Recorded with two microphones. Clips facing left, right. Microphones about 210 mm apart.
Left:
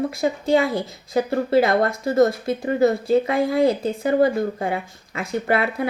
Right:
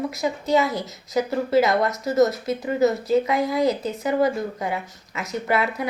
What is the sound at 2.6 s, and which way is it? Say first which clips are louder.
Speech: left 2 dB; 55° left (ahead or behind).